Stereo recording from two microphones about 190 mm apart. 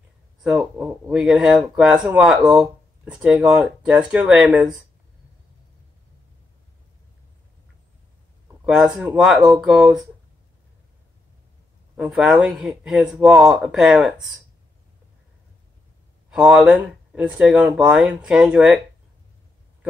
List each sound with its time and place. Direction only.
0.4 s speech: 5° right (ahead or behind)
8.6 s speech: 5° right (ahead or behind)
12.0 s speech: 5° right (ahead or behind)
16.3 s speech: 5° right (ahead or behind)